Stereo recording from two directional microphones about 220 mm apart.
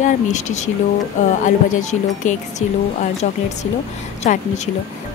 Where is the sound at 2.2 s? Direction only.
35° left (ahead or behind).